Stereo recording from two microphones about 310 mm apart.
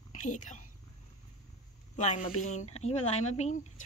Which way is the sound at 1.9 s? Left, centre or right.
Left.